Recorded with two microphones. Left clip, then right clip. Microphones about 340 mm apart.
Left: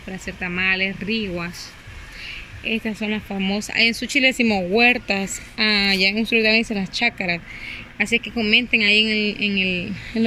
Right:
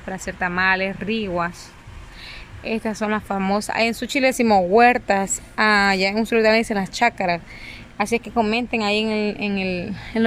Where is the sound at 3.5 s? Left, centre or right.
Centre.